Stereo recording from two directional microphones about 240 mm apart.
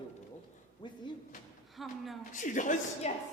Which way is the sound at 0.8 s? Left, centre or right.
Centre.